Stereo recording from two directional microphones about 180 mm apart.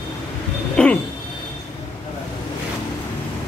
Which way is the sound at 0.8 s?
5° left (ahead or behind).